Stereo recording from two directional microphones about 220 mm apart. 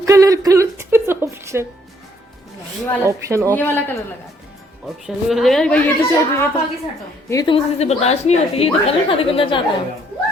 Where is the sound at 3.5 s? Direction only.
10° left (ahead or behind).